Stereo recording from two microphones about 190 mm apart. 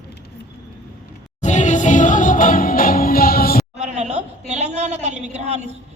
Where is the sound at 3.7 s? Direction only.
35° right (ahead or behind).